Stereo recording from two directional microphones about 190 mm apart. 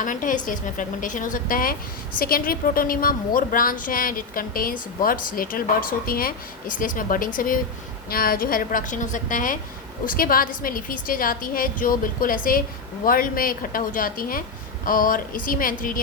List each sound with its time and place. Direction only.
0.0 s a woman's voice: 45° left (ahead or behind)